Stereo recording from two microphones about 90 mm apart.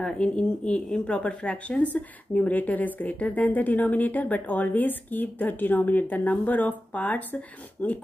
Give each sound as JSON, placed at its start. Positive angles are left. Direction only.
{"t": 0.0, "sound": "speech", "side_deg": 10}